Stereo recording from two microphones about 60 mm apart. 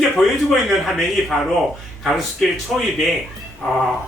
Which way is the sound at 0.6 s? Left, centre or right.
Centre.